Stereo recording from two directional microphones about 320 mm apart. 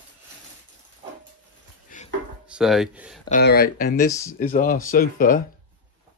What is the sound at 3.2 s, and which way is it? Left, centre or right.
Speech, left.